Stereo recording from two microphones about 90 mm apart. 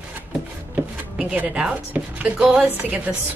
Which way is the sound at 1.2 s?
10° right (ahead or behind).